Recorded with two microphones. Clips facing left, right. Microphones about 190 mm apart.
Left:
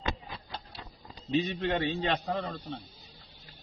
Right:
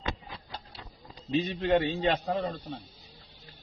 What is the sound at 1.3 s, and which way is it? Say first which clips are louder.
Speech: right 3 dB; centre (ahead or behind).